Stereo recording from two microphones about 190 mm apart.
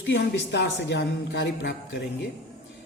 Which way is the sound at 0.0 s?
60° left (ahead or behind).